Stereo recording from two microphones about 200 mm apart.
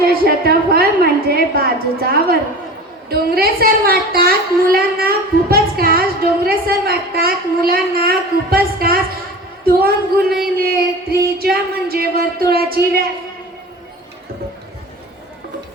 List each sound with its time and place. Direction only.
0.0 s a woman's voice: 50° right (ahead or behind)